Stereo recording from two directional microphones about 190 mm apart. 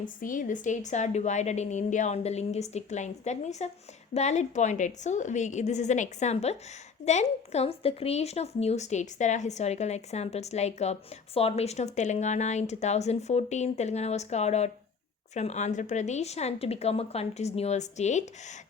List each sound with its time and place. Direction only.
0.0 s a woman's voice: 45° left (ahead or behind)